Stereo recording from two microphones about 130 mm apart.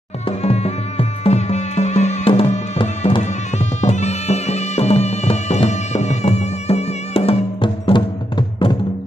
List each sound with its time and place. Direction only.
0.4 s music: 55° left (ahead or behind); by 8.7 s 40° left (ahead or behind)